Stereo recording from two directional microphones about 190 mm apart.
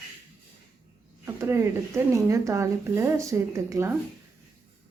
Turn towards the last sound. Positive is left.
turn(degrees=-15)  # may be behind; listen again after turning